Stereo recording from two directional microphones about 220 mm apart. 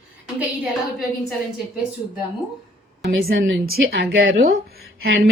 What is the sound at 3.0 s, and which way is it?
A woman's voice, 45° right (ahead or behind).